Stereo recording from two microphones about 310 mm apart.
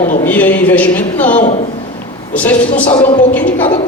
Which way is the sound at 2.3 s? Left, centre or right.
Centre.